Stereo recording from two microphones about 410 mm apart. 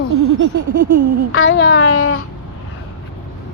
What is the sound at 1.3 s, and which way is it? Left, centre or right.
Speech, left.